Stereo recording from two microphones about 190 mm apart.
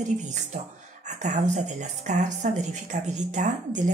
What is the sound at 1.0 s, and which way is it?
Speech, 40° right (ahead or behind).